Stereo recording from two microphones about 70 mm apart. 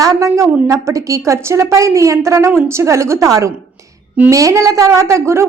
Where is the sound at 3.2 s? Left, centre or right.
Right.